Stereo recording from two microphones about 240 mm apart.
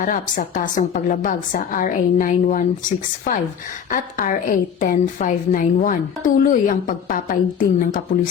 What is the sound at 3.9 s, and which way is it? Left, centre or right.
A woman's voice, left.